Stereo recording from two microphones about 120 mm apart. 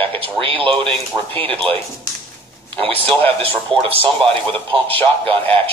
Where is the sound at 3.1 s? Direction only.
15° left (ahead or behind).